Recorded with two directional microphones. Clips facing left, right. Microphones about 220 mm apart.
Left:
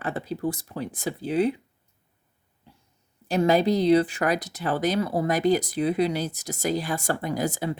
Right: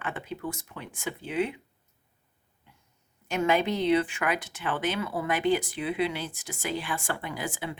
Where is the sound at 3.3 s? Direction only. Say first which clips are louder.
Left 5 dB; 35° left (ahead or behind).